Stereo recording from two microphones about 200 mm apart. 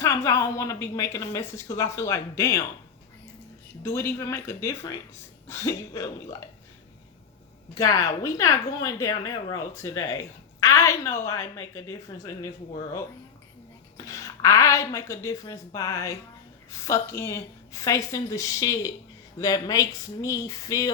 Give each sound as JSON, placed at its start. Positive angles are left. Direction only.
{"t": 0.3, "sound": "a woman's voice", "side_deg": 15}
{"t": 3.8, "sound": "a woman's voice", "side_deg": 15}
{"t": 7.8, "sound": "a woman's voice", "side_deg": 15}
{"t": 13.9, "sound": "a woman's voice", "side_deg": 15}